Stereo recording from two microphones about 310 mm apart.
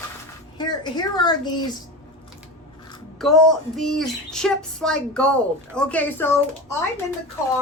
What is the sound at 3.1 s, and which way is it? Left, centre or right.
Speech, centre.